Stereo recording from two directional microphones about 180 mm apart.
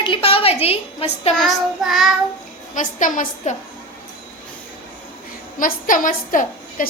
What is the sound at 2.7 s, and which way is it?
Speech, 45° left (ahead or behind).